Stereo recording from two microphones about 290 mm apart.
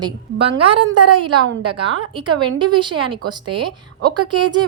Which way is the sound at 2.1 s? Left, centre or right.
Centre.